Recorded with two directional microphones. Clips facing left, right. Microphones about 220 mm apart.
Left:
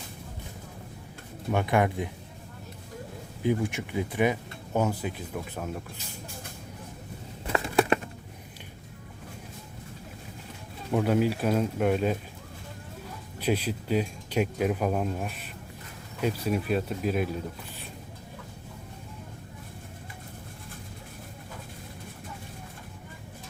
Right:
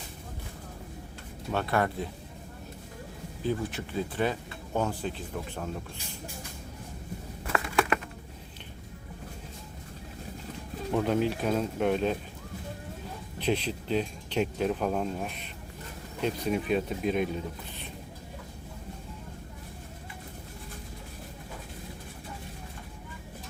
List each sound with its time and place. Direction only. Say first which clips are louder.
1.5 s speech: left 3 dB; 15° left (ahead or behind)
3.4 s speech: left 4 dB; 15° left (ahead or behind)
7.4 s a sound: left 3 dB; 25° left (ahead or behind)
10.9 s speech: left 2 dB; 5° left (ahead or behind)
13.4 s speech: left 1 dB; 10° left (ahead or behind)